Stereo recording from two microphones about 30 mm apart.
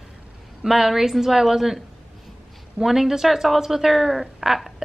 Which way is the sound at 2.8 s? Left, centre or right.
Centre.